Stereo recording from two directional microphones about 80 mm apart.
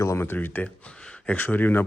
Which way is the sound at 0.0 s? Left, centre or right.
Left.